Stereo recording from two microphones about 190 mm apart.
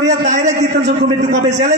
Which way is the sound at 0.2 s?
35° right (ahead or behind).